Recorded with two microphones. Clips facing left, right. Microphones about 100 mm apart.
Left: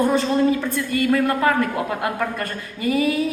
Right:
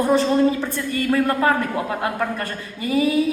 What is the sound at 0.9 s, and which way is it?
A woman's voice, 25° right (ahead or behind).